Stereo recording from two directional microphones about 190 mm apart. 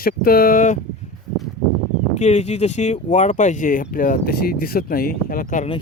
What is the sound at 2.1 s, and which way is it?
Speech, 35° left (ahead or behind).